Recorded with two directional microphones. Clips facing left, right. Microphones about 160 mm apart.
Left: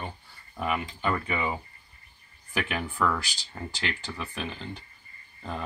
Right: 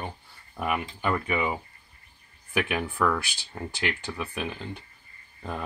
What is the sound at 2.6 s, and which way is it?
Speech, 15° right (ahead or behind).